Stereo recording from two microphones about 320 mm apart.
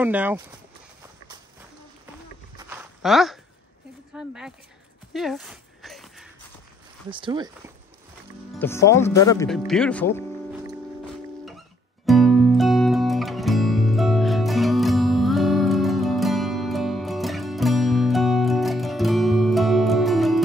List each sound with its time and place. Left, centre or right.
0.0 s speech: centre
2.5 s a sound: centre
4.1 s speech: centre
5.1 s a sound: centre
7.1 s speech: centre
8.5 s speech: centre
12.1 s music: centre